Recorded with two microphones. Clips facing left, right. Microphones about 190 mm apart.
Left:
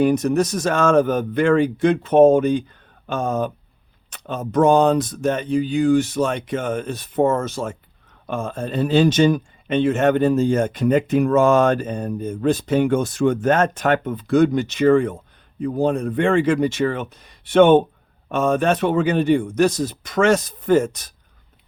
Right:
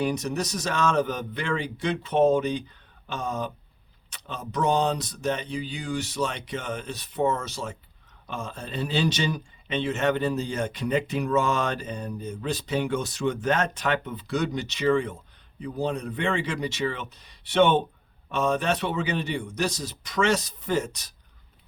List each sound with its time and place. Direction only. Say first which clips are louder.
0.0 s speech: left 10 dB; 50° left (ahead or behind)